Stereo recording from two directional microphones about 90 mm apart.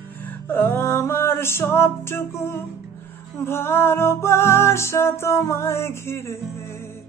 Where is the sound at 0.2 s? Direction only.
20° left (ahead or behind).